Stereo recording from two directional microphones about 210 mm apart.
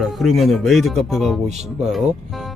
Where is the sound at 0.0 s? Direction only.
Centre (ahead or behind).